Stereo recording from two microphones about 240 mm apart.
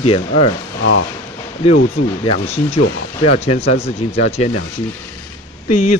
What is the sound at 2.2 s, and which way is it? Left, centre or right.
Speech, left.